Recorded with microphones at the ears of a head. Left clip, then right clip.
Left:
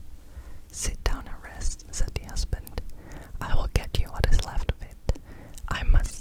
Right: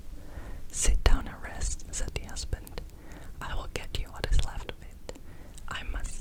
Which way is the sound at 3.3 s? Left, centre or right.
Left.